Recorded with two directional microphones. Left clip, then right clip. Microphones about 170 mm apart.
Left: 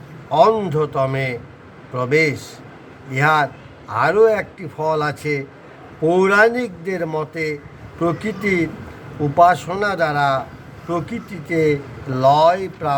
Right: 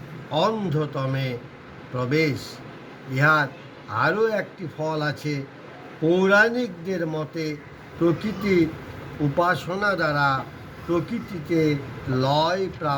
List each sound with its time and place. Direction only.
0.3 s speech: 25° left (ahead or behind)